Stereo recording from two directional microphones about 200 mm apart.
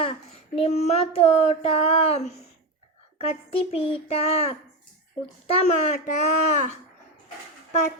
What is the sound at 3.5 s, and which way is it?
A child's voice, 30° left (ahead or behind).